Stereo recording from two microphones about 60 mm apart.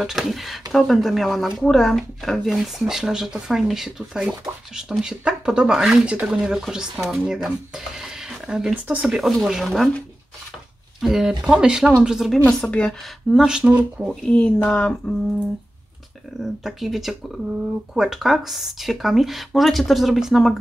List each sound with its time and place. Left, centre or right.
0.0 s speech: centre
6.0 s speech: centre
11.0 s speech: centre
12.4 s speech: left
13.5 s speech: centre
14.2 s speech: centre
16.3 s speech: centre